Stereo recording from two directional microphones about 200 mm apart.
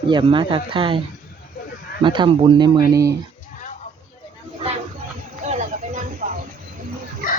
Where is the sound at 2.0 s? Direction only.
25° right (ahead or behind).